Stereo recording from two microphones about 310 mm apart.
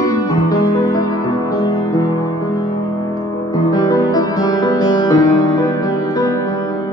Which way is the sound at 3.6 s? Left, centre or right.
Centre.